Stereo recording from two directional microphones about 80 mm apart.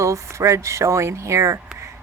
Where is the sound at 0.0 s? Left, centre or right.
Right.